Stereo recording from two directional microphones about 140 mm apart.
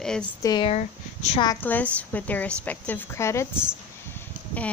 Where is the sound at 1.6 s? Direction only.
10° left (ahead or behind).